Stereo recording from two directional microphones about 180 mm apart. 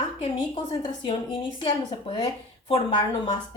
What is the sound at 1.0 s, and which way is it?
Speech, 30° left (ahead or behind).